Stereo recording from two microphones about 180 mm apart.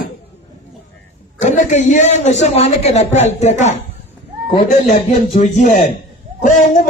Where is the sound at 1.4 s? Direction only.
40° left (ahead or behind).